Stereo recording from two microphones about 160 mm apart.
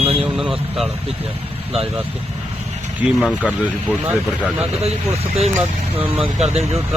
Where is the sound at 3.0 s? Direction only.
Centre (ahead or behind).